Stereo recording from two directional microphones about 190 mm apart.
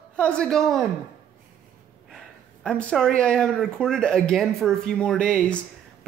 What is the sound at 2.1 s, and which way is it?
Speech, 5° left (ahead or behind).